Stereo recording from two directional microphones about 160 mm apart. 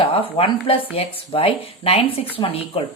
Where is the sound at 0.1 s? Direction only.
35° left (ahead or behind).